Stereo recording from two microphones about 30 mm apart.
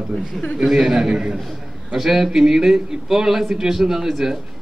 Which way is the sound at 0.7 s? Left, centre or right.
Centre.